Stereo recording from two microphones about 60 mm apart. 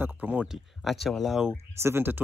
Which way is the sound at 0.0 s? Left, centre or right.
Right.